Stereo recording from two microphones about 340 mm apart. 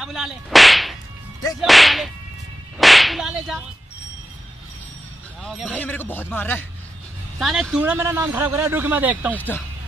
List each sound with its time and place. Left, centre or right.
0.0 s whip: centre
1.6 s a man's voice: centre
2.8 s whip: centre
5.4 s a man's voice: centre